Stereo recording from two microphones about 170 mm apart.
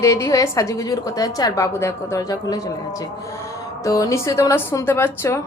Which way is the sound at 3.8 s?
20° left (ahead or behind).